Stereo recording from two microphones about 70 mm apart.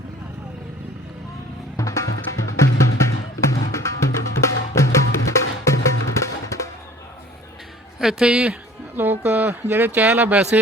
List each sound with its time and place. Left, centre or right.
1.7 s music: left
7.9 s a woman's voice: centre
9.0 s speech: right